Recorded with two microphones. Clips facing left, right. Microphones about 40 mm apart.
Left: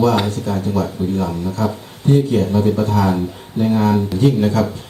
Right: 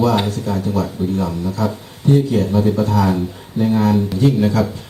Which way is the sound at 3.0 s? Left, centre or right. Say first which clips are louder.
Even; left.